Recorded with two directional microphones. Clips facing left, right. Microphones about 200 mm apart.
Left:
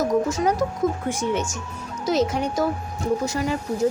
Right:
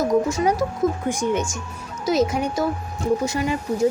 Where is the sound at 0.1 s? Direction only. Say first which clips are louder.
Right 2 dB; 10° right (ahead or behind).